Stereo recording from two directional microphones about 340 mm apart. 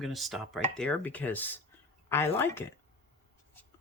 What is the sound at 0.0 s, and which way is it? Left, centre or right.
Chopping, centre.